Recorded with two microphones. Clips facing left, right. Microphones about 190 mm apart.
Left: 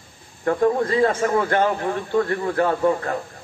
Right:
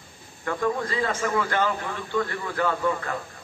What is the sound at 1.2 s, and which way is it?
Speech, 45° left (ahead or behind).